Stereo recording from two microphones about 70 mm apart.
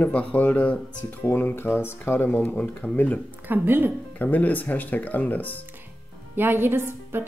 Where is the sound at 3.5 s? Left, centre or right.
Right.